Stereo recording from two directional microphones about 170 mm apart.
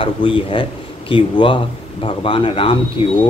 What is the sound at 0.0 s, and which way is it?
Speech, 30° left (ahead or behind).